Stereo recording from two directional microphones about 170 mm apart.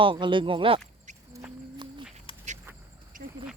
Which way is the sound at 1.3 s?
10° right (ahead or behind).